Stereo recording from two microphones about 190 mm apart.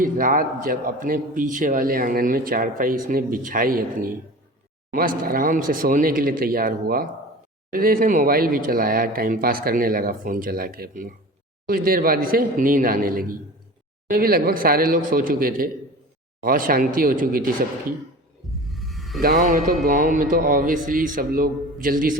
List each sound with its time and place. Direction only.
0.0 s a man's voice: 45° right (ahead or behind)
18.6 s music: centre (ahead or behind)
19.2 s a man's voice: 50° right (ahead or behind)